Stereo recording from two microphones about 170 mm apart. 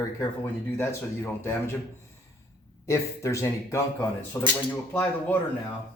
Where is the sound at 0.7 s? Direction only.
15° left (ahead or behind).